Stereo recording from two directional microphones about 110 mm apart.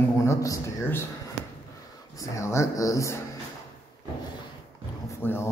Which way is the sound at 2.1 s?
25° left (ahead or behind).